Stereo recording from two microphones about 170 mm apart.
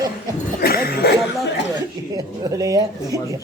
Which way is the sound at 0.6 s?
65° left (ahead or behind).